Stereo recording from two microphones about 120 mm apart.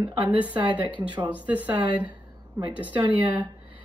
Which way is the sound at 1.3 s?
10° right (ahead or behind).